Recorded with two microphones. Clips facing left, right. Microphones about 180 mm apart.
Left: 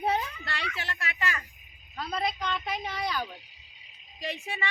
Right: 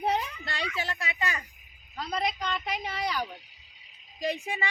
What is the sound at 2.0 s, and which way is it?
A woman's voice, centre (ahead or behind).